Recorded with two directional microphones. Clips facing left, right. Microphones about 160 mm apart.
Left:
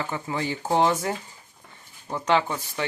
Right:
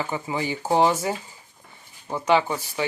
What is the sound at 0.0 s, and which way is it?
Speech, 10° right (ahead or behind).